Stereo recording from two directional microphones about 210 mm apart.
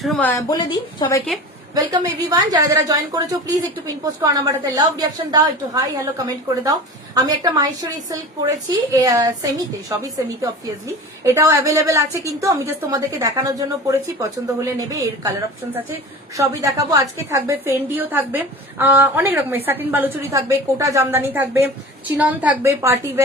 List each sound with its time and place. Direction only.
0.0 s speech: 5° left (ahead or behind)
0.5 s a woman's voice: 20° left (ahead or behind)
1.7 s a woman's voice: 20° right (ahead or behind)
16.4 s a woman's voice: 15° right (ahead or behind)